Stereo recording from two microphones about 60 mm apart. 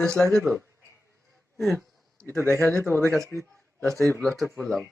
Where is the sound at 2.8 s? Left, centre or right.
Right.